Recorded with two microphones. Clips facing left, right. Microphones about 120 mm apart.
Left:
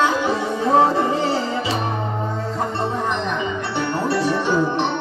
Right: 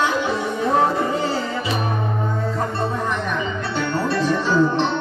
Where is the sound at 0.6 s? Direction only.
30° left (ahead or behind).